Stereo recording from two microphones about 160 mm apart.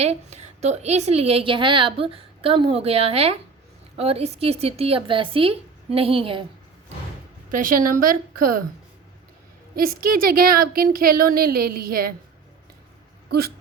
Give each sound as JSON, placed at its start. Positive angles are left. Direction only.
{"t": 0.0, "sound": "a woman's voice", "side_deg": -45}
{"t": 7.5, "sound": "speech", "side_deg": -60}
{"t": 9.7, "sound": "speech", "side_deg": -65}